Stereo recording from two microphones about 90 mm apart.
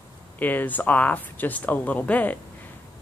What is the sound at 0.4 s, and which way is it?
Speech, 20° left (ahead or behind).